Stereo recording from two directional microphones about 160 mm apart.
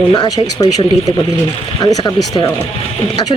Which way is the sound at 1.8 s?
25° left (ahead or behind).